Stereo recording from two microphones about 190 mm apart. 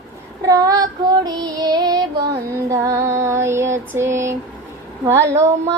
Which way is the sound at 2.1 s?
60° right (ahead or behind).